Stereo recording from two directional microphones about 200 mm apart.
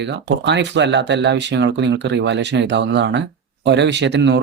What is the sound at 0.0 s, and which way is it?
Speech, 60° right (ahead or behind).